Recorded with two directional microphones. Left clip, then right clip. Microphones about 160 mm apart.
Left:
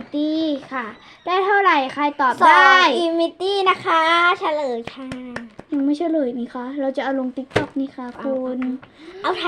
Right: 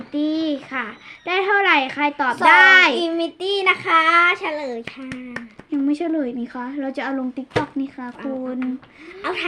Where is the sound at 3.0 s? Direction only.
15° left (ahead or behind).